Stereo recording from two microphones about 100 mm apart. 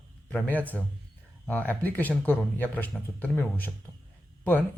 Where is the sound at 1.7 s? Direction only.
15° left (ahead or behind).